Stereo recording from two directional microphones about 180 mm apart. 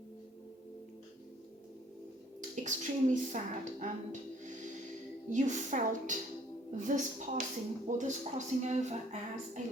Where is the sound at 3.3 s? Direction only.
40° right (ahead or behind).